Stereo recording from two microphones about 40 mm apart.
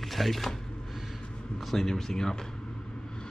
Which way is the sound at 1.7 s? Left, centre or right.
Centre.